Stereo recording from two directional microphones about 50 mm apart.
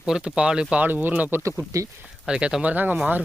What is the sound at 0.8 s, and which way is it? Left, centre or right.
Speech, right.